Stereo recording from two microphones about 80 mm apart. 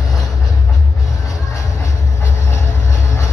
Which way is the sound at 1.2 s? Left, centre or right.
Left.